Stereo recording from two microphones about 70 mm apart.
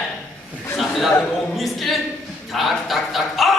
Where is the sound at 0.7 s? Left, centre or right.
Centre.